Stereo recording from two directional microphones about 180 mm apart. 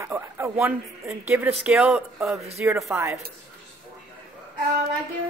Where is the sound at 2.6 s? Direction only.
15° right (ahead or behind).